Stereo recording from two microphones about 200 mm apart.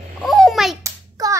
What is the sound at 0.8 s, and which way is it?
Hands, 15° right (ahead or behind).